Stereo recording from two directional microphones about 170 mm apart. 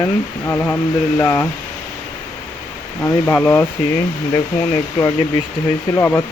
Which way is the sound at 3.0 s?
10° left (ahead or behind).